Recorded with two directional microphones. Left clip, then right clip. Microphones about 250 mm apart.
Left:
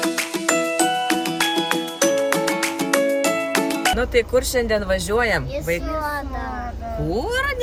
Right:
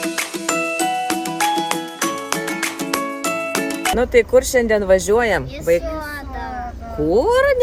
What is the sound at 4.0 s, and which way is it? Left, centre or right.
Speech, right.